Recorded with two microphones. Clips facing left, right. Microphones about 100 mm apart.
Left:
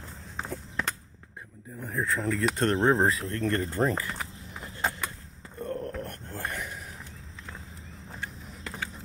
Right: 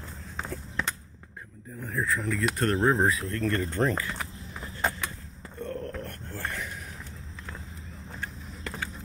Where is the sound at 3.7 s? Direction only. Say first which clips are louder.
Even; 10° left (ahead or behind).